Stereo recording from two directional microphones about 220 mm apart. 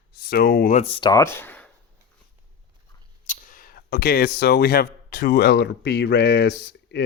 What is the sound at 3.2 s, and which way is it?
Speech, 40° left (ahead or behind).